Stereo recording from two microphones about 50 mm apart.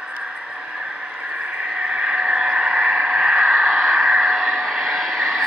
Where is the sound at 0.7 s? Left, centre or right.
Centre.